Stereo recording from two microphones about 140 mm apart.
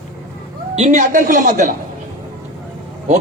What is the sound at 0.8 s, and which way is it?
Speech, 60° right (ahead or behind).